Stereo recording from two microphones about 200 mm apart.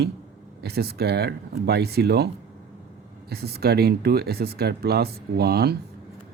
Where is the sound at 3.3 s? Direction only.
50° right (ahead or behind).